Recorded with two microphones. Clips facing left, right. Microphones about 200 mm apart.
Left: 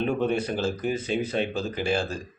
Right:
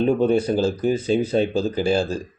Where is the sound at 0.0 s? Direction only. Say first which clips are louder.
Right 7 dB; 35° right (ahead or behind).